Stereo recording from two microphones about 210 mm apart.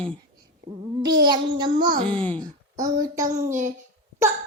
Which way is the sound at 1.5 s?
20° right (ahead or behind).